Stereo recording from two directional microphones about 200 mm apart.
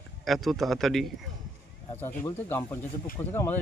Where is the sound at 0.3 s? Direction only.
Centre (ahead or behind).